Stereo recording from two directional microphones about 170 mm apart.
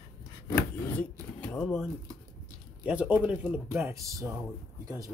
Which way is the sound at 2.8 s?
10° right (ahead or behind).